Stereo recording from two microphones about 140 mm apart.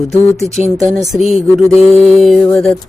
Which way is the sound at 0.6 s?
60° right (ahead or behind).